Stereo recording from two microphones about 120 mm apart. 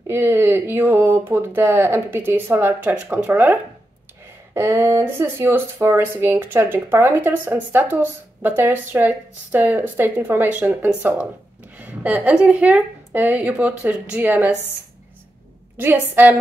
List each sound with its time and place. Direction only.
0.0 s speech: 20° right (ahead or behind)
4.6 s speech: 20° right (ahead or behind)
15.8 s speech: 15° right (ahead or behind)